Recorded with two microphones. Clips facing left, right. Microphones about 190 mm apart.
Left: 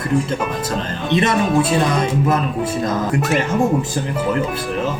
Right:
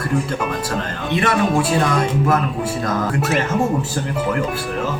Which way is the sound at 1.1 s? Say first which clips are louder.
Left 2 dB; 20° left (ahead or behind).